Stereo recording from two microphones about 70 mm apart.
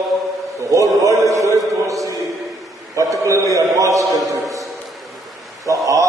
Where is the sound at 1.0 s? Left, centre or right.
Right.